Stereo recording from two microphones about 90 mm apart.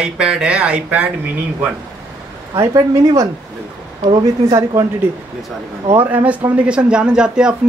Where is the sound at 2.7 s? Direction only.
40° right (ahead or behind).